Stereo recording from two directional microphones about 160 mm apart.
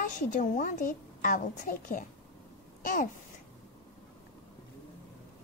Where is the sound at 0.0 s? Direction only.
50° left (ahead or behind).